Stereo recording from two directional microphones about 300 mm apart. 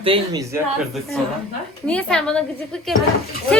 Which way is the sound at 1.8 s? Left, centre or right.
Centre.